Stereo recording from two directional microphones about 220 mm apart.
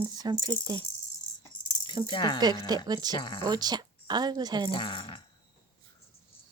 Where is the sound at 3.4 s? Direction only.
20° right (ahead or behind).